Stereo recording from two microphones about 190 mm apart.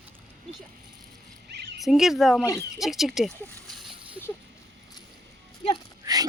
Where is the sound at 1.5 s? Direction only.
60° right (ahead or behind).